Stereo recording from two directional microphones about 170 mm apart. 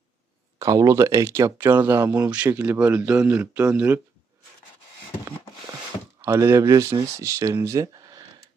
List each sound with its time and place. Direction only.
0.6 s speech: 20° right (ahead or behind)
6.2 s speech: 15° right (ahead or behind)